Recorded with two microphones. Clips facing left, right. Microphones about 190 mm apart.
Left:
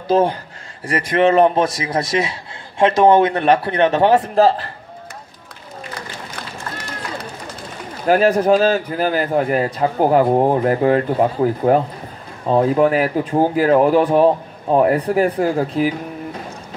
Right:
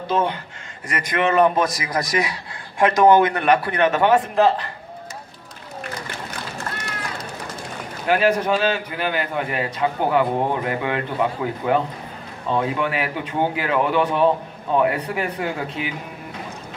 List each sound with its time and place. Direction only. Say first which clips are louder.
0.1 s a man's voice: left 7 dB; 35° left (ahead or behind)
8.1 s a man's voice: left 5 dB; 40° left (ahead or behind)